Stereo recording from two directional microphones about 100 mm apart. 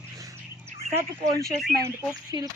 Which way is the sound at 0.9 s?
35° right (ahead or behind).